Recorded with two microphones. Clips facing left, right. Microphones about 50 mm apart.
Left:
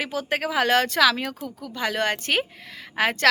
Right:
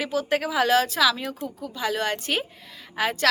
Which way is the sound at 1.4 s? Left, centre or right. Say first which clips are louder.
Right 2 dB; right.